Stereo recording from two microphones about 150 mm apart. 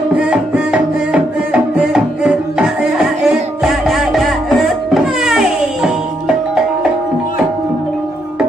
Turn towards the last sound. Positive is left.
turn(degrees=-5)  # may be behind; listen again after turning